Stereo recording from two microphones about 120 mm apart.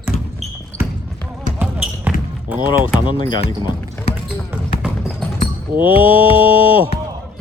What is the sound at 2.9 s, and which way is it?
Speech, 45° left (ahead or behind).